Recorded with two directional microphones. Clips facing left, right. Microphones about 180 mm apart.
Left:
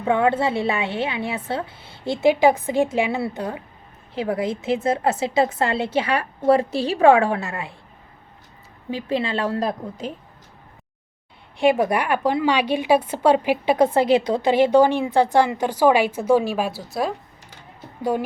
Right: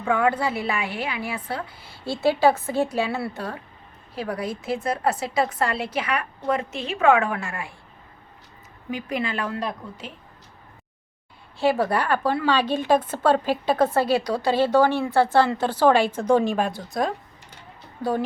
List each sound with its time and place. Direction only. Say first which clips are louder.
0.0 s a woman's voice: left 3 dB; 25° left (ahead or behind)
8.9 s a woman's voice: left 4 dB; 30° left (ahead or behind)
11.5 s a woman's voice: left 3 dB; 15° left (ahead or behind)